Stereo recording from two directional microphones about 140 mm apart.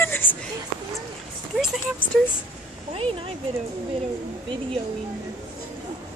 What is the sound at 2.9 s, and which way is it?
Speech, 45° right (ahead or behind).